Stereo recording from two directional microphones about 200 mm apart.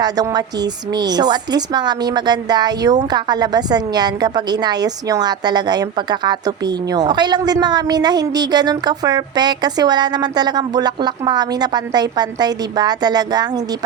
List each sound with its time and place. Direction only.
0.0 s a woman's voice: 20° right (ahead or behind)